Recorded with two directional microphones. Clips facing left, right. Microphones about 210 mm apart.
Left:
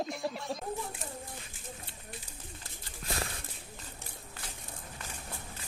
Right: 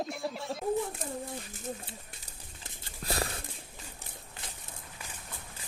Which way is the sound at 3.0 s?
35° right (ahead or behind).